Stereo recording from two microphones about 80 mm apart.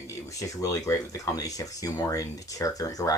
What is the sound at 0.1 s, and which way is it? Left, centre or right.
Speech, left.